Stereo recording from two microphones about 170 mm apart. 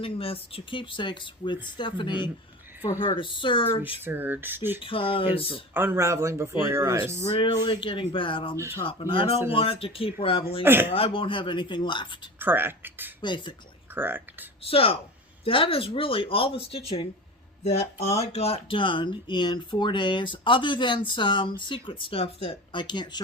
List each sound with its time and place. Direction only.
0.0 s speech: 35° left (ahead or behind)
4.0 s speech: 10° right (ahead or behind)
4.8 s speech: 30° left (ahead or behind)
5.7 s speech: 15° right (ahead or behind)
7.3 s speech: 30° left (ahead or behind)
10.6 s speech: 10° right (ahead or behind)
10.9 s speech: 30° left (ahead or behind)
12.4 s speech: 10° right (ahead or behind)
13.2 s speech: 25° left (ahead or behind)
13.9 s speech: 10° right (ahead or behind)
14.6 s speech: 35° left (ahead or behind)